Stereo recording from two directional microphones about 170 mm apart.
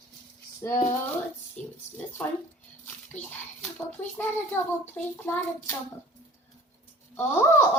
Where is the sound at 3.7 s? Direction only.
10° left (ahead or behind).